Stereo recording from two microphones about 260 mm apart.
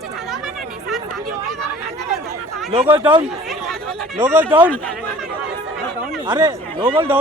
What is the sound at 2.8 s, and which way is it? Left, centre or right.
Speech, centre.